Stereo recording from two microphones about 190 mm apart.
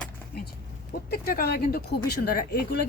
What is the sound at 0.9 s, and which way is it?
Speech, 50° left (ahead or behind).